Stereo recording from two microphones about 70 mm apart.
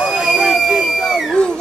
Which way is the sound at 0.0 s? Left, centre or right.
Centre.